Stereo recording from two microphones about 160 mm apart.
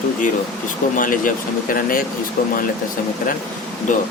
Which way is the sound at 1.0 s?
55° left (ahead or behind).